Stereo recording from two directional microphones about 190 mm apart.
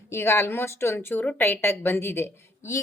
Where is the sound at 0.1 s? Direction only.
15° left (ahead or behind).